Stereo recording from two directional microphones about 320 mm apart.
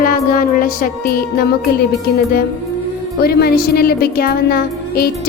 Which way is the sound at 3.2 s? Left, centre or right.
Left.